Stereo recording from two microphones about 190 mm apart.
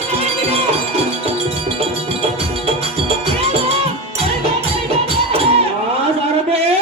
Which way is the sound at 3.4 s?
30° right (ahead or behind).